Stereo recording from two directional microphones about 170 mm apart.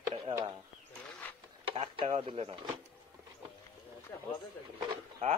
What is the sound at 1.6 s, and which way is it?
Speech, 35° right (ahead or behind).